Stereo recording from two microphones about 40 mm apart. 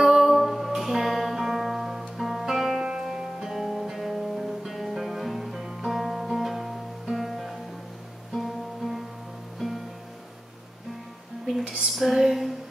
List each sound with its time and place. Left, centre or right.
0.0 s music: centre
3.5 s music: centre
11.6 s female singing: centre
11.9 s a sound: centre